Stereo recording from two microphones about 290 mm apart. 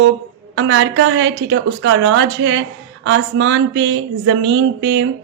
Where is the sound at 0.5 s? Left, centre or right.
Right.